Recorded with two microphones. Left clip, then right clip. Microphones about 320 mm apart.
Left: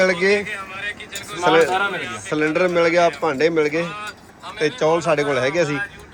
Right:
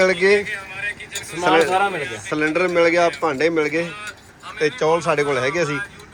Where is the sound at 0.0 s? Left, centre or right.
Centre.